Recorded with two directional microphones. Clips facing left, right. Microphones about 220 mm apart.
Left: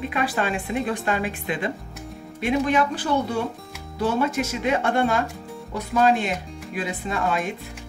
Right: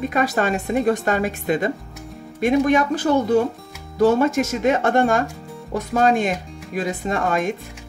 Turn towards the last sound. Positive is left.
turn(degrees=-45)  # may be behind; listen again after turning